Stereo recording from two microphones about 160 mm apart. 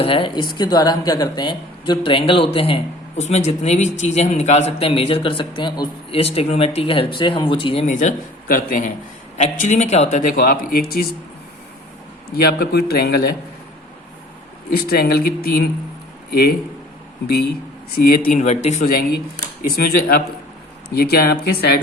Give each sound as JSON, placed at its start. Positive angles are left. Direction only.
{"t": 0.0, "sound": "speech", "side_deg": 35}
{"t": 6.1, "sound": "speech", "side_deg": 40}
{"t": 7.9, "sound": "a man's voice", "side_deg": 50}
{"t": 12.5, "sound": "a man's voice", "side_deg": 75}
{"t": 14.8, "sound": "a man's voice", "side_deg": 70}
{"t": 17.9, "sound": "a man's voice", "side_deg": 65}
{"t": 19.7, "sound": "speech", "side_deg": 65}
{"t": 20.9, "sound": "a man's voice", "side_deg": 80}